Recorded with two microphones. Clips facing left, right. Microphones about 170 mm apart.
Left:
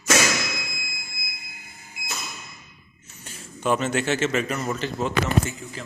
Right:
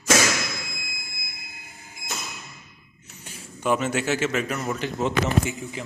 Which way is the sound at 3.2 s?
10° right (ahead or behind).